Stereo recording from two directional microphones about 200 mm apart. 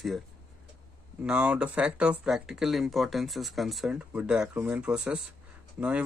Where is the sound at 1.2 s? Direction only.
5° right (ahead or behind).